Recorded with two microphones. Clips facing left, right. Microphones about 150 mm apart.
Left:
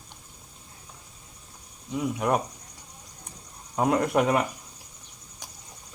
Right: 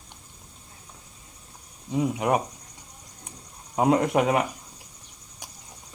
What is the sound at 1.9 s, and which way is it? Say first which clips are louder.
Speech: right 2 dB; 20° right (ahead or behind).